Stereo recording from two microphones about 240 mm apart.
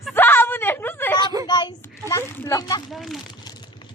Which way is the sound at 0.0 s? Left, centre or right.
Centre.